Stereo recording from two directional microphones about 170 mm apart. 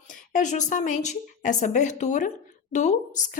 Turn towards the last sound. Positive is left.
turn(degrees=45)  # may be behind; listen again after turning